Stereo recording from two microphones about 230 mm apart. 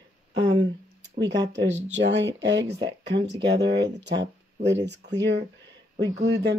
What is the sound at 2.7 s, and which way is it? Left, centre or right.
Speech, centre.